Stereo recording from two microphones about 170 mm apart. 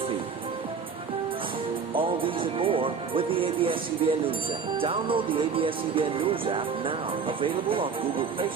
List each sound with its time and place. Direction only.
1.9 s music: 30° right (ahead or behind)